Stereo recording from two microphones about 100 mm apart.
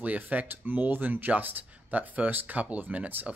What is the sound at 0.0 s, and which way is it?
Speech, 15° right (ahead or behind).